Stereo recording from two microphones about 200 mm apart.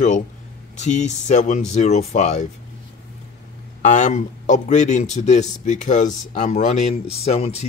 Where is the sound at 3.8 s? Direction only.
40° left (ahead or behind).